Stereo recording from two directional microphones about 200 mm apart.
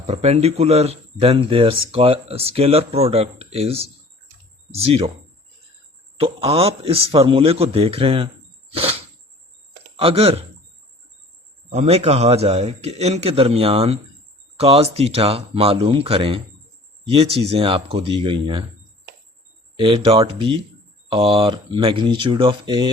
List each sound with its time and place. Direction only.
0.0 s a man's voice: 30° right (ahead or behind)
6.1 s a man's voice: 30° right (ahead or behind)
8.7 s a sound: 30° right (ahead or behind)
10.0 s a man's voice: 30° right (ahead or behind)
11.7 s a man's voice: 30° right (ahead or behind)
19.8 s a man's voice: 25° right (ahead or behind)